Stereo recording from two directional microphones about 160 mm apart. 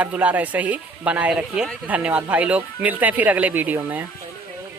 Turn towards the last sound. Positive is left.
turn(degrees=-10)  # may be behind; listen again after turning